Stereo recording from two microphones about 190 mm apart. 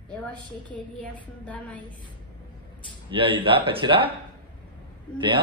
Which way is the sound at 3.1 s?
25° right (ahead or behind).